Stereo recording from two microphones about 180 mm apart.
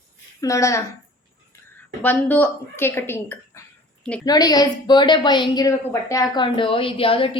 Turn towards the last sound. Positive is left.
turn(degrees=30)  # may be behind; listen again after turning